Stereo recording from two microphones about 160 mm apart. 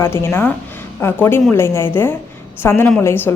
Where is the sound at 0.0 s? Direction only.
15° left (ahead or behind).